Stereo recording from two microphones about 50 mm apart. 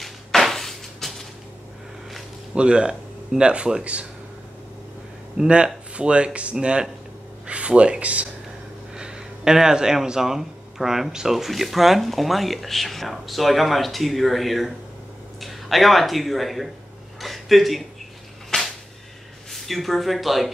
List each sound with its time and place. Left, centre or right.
0.0 s a sound: centre
2.5 s speech: centre
5.4 s speech: centre
8.9 s speech: centre
17.2 s a sound: centre
18.5 s whip: left
19.5 s speech: centre